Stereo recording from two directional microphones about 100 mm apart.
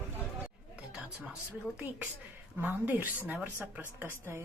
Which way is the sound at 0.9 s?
10° right (ahead or behind).